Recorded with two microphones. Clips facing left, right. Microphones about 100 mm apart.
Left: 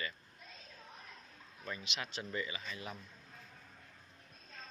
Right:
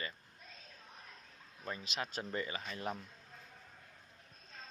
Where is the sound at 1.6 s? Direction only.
35° right (ahead or behind).